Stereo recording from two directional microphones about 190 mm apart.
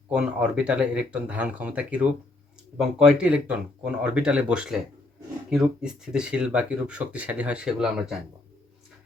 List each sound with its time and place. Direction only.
0.1 s speech: 5° right (ahead or behind)